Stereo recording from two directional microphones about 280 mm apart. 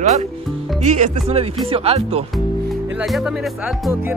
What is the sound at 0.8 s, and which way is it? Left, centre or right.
Speech, right.